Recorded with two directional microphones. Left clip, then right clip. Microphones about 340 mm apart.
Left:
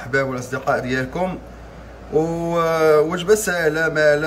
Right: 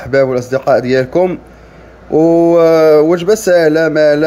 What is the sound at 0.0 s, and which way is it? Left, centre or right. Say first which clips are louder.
Speech: right 10 dB; centre.